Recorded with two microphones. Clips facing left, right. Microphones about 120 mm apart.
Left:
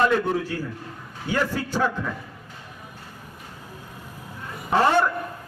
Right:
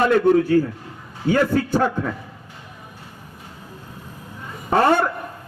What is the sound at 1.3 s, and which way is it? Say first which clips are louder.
Speech: right 7 dB; 50° right (ahead or behind).